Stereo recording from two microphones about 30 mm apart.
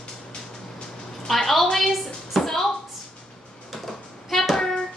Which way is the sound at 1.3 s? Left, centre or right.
Centre.